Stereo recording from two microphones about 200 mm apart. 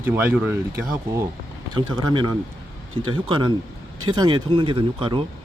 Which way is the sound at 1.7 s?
20° right (ahead or behind).